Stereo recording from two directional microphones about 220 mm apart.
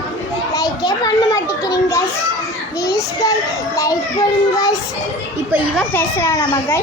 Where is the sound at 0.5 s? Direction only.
15° left (ahead or behind).